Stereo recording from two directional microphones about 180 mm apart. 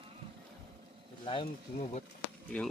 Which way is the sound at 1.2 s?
30° left (ahead or behind).